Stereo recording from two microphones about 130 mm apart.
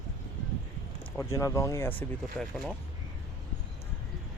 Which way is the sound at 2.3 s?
5° left (ahead or behind).